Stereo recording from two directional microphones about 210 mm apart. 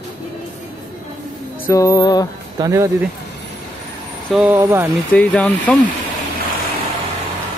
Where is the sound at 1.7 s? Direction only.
15° left (ahead or behind).